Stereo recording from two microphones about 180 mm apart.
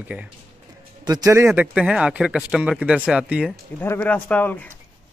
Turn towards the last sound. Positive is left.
turn(degrees=10)  # may be behind; listen again after turning